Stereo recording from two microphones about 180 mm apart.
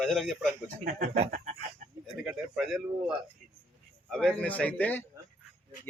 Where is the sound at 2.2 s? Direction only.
5° right (ahead or behind).